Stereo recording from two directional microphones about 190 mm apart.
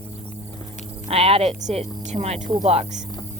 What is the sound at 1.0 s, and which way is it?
Speech, 30° right (ahead or behind).